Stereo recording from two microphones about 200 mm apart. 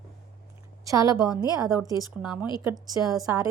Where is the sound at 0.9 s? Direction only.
15° right (ahead or behind).